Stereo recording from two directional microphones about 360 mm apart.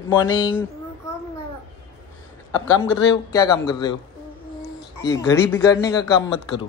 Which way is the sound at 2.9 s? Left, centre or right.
Centre.